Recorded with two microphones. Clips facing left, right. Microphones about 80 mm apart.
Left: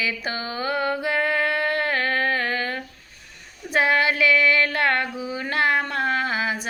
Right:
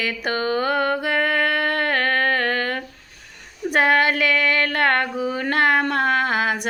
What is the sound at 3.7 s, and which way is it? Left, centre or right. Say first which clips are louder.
Female singing: right 3 dB; right.